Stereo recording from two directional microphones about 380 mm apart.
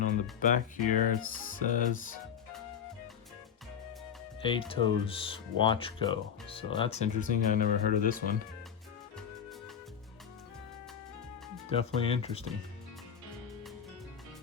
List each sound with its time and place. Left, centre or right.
0.0 s speech: left
4.4 s speech: centre
11.7 s speech: centre